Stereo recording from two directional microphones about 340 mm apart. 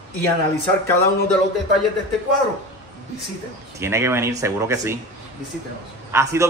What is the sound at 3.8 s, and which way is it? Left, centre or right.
A man's voice, centre.